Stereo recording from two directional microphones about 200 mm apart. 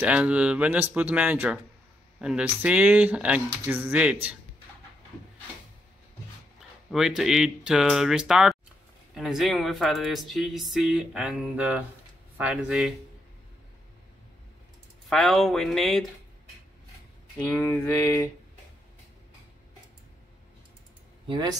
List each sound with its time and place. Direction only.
0.0 s speech: 5° right (ahead or behind)
6.9 s speech: centre (ahead or behind)
15.0 s speech: centre (ahead or behind)
17.4 s a sound: 5° left (ahead or behind)
21.3 s speech: 20° right (ahead or behind)